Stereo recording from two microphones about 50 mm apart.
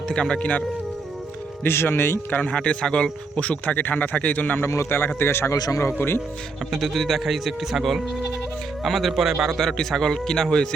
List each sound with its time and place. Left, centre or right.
0.1 s speech: centre
1.6 s speech: left
2.3 s speech: left
2.6 s speech: centre
4.6 s a man's voice: left
4.9 s speech: left
6.0 s speech: left
6.7 s speech: centre
9.5 s a man's voice: centre